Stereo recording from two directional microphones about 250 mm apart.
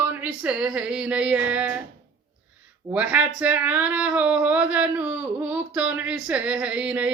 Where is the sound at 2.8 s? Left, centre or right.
Centre.